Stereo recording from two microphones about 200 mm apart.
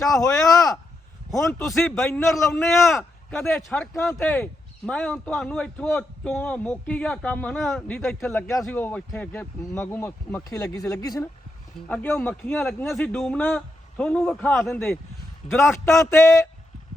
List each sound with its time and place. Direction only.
0.2 s a man's voice: 15° left (ahead or behind)
1.4 s a man's voice: centre (ahead or behind)